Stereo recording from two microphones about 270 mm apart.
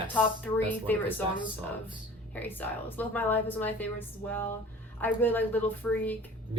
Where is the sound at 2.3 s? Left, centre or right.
Centre.